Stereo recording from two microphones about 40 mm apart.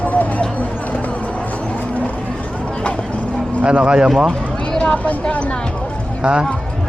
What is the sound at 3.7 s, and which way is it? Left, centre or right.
Speech, right.